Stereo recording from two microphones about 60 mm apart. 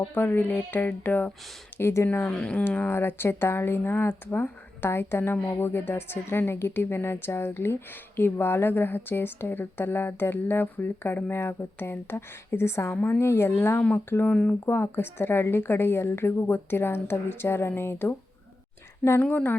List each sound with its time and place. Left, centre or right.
0.1 s speech: left
1.8 s speech: left
2.2 s speech: centre
2.6 s speech: left
19.2 s speech: left